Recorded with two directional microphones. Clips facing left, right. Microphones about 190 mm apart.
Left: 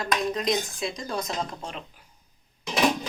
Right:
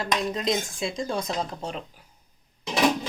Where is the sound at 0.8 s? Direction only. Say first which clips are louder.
Right 2 dB; 25° right (ahead or behind).